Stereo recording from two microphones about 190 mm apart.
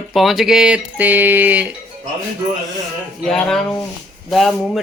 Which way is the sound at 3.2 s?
5° left (ahead or behind).